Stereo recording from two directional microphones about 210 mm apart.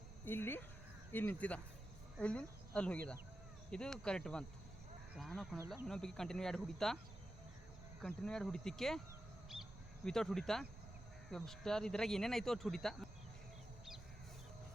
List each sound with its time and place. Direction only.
0.3 s speech: 10° left (ahead or behind)
8.0 s speech: 5° left (ahead or behind)
10.1 s speech: centre (ahead or behind)